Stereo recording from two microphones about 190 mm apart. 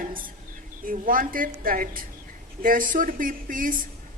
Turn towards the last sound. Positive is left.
turn(degrees=-45)  # may be behind; listen again after turning